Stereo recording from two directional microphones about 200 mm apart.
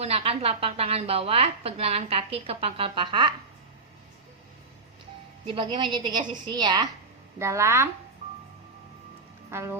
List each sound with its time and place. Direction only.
0.0 s a woman's voice: 30° right (ahead or behind)
5.5 s a woman's voice: 25° right (ahead or behind)
9.5 s speech: 15° right (ahead or behind)